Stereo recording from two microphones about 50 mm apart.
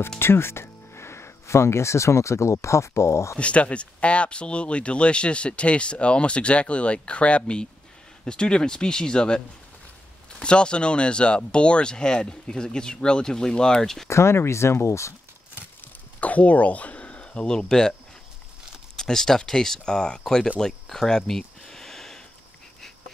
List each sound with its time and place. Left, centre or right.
0.2 s speech: left
3.3 s speech: left
10.4 s speech: centre
14.0 s speech: left
15.8 s a sound: left; by 17.9 s centre
18.9 s speech: centre
21.3 s a sound: centre